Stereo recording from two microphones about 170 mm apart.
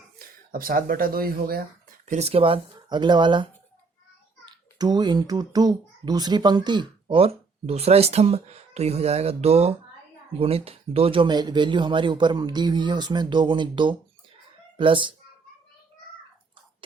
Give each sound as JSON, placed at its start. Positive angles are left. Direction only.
{"t": 0.5, "sound": "speech", "side_deg": -55}
{"t": 2.0, "sound": "a child's voice", "side_deg": -40}